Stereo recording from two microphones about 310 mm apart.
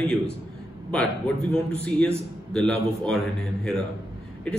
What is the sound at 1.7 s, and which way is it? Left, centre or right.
A man's voice, centre.